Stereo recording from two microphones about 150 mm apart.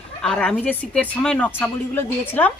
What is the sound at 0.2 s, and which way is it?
Speech, 5° left (ahead or behind).